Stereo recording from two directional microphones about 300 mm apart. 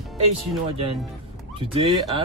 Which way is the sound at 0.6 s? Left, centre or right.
Centre.